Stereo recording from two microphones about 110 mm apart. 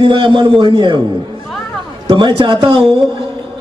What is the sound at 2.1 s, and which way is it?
Speech, 50° right (ahead or behind).